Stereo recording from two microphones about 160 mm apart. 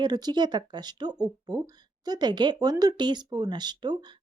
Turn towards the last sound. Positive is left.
turn(degrees=-25)  # may be behind; listen again after turning